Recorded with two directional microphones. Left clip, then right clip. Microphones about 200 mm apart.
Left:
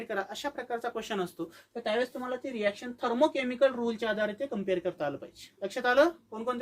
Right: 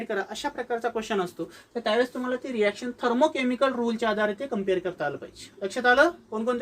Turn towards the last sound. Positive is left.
turn(degrees=25)  # may be behind; listen again after turning